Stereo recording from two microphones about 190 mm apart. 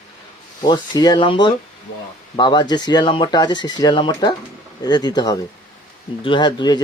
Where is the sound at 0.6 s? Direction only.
20° left (ahead or behind).